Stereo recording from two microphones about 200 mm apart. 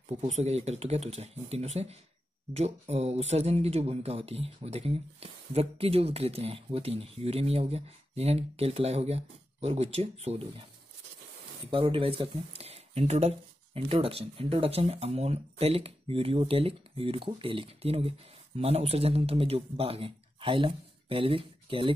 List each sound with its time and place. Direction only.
0.1 s speech: 35° right (ahead or behind)
11.7 s speech: 25° right (ahead or behind)